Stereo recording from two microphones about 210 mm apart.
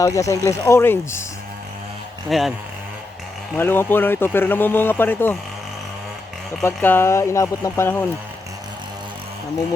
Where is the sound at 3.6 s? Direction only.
10° left (ahead or behind).